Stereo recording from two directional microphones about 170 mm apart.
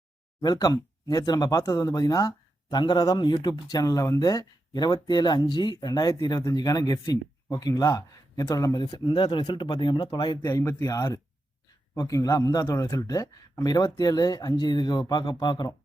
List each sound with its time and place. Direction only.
0.4 s speech: 25° left (ahead or behind)